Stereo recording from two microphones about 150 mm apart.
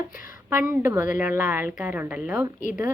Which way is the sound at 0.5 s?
15° right (ahead or behind).